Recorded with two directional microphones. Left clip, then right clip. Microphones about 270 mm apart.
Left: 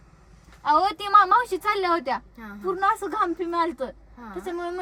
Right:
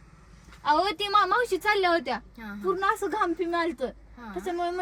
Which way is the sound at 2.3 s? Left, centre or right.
Centre.